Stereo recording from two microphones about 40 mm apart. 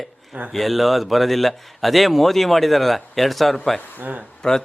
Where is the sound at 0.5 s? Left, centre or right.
Centre.